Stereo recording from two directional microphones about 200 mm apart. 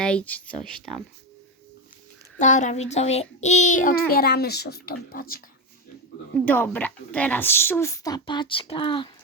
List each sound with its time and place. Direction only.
0.0 s speech: 5° left (ahead or behind)
2.4 s child singing: 40° left (ahead or behind)
6.3 s a woman's voice: 10° left (ahead or behind); by 9.0 s 25° left (ahead or behind)